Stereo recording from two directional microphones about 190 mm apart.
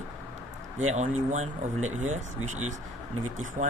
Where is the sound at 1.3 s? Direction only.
40° right (ahead or behind).